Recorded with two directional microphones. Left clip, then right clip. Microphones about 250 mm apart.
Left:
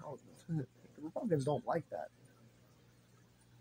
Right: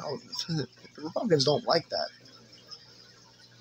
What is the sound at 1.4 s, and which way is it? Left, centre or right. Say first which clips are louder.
Speech: right 11 dB; right.